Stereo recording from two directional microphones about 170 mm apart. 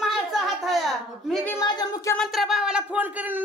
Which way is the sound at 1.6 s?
25° left (ahead or behind).